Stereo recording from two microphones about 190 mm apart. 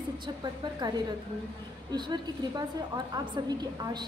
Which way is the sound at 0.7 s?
20° right (ahead or behind).